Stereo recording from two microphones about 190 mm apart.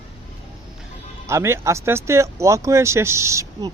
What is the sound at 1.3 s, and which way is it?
Speech, 15° right (ahead or behind).